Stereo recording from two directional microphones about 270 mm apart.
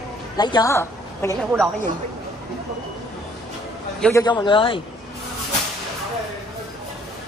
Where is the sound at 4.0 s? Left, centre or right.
Centre.